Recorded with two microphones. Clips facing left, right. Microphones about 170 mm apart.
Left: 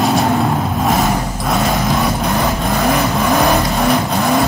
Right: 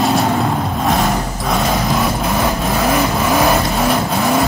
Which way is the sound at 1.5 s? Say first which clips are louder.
Left 1 dB; centre (ahead or behind).